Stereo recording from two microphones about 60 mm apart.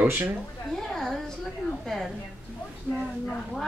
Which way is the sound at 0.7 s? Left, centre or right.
Centre.